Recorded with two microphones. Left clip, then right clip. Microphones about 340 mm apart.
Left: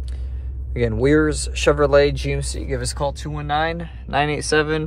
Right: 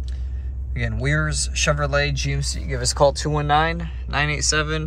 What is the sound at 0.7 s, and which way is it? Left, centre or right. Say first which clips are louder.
Speech: left 8 dB; centre.